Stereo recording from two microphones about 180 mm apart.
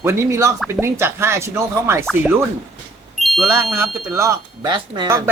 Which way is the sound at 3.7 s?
15° right (ahead or behind).